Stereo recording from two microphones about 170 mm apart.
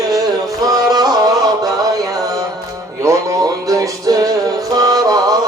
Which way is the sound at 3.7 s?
20° right (ahead or behind).